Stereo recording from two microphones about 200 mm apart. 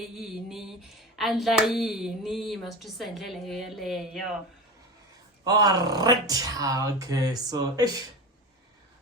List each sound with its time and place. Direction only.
0.2 s speech: centre (ahead or behind)
5.5 s speech: 20° right (ahead or behind)